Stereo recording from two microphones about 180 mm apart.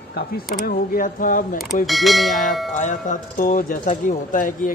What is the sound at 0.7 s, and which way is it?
Speech, 50° left (ahead or behind).